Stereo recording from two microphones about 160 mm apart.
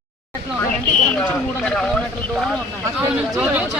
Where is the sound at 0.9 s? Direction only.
10° left (ahead or behind).